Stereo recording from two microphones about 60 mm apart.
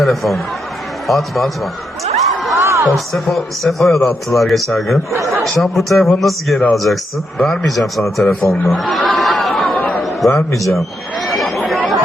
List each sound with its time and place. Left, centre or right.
0.0 s a man's voice: centre
2.6 s a sound: right
2.9 s a man's voice: centre
8.7 s chatter: centre
10.2 s a man's voice: centre
11.3 s chatter: centre